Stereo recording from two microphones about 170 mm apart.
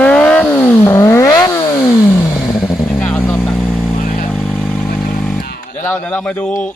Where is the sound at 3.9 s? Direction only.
55° left (ahead or behind).